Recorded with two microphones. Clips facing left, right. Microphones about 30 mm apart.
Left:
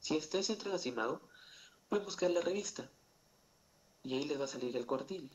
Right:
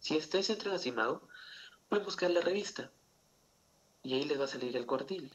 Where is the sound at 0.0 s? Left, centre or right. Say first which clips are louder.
Right 3 dB; right.